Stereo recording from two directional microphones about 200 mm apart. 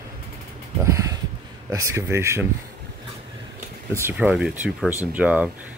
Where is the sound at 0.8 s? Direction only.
15° right (ahead or behind).